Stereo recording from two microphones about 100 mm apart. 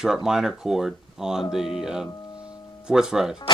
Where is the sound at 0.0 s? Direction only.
5° right (ahead or behind).